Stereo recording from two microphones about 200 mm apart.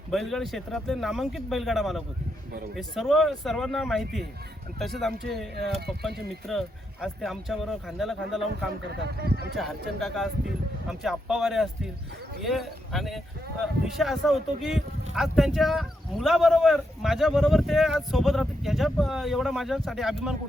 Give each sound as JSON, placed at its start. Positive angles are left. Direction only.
{"t": 0.1, "sound": "speech", "side_deg": 0}
{"t": 9.0, "sound": "speech", "side_deg": -55}
{"t": 9.6, "sound": "speech", "side_deg": 0}